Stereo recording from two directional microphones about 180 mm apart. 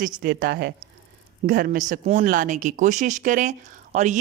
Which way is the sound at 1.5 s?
55° right (ahead or behind).